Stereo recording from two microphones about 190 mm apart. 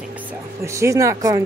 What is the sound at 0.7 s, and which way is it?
Speech, 15° right (ahead or behind).